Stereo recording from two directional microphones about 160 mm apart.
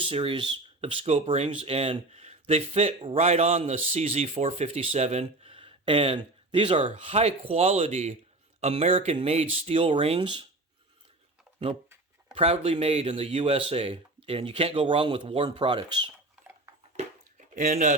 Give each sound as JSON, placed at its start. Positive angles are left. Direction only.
{"t": 0.0, "sound": "speech", "side_deg": -35}
{"t": 6.8, "sound": "speech", "side_deg": -45}
{"t": 12.3, "sound": "speech", "side_deg": -35}
{"t": 17.3, "sound": "a sound", "side_deg": -55}